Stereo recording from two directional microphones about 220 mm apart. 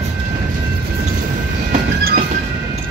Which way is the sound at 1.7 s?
35° right (ahead or behind).